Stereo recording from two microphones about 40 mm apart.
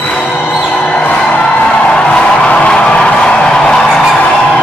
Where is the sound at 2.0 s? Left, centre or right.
Left.